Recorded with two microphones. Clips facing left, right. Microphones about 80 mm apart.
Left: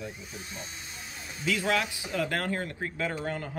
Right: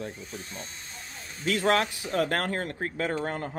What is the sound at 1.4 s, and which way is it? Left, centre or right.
Speech, right.